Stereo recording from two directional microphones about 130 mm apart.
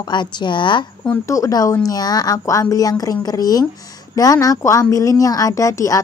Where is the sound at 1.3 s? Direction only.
25° left (ahead or behind).